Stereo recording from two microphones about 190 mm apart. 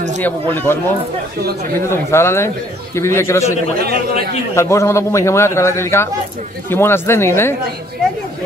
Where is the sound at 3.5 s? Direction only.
55° right (ahead or behind).